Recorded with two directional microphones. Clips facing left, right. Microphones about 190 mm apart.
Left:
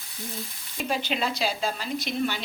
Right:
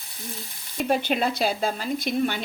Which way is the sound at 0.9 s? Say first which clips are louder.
Right 5 dB; 55° right (ahead or behind).